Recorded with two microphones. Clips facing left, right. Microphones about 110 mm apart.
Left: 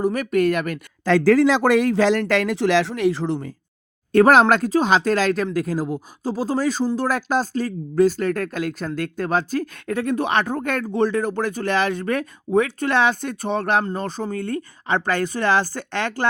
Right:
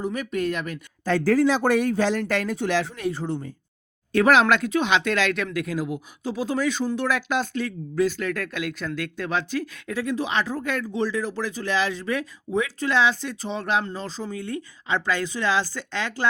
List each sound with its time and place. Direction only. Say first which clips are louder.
0.0 s speech: left 7 dB; 65° left (ahead or behind); by 3.5 s 90° left
4.1 s speech: left 4 dB; 45° left (ahead or behind)